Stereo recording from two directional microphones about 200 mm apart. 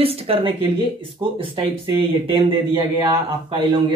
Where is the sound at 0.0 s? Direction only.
30° right (ahead or behind).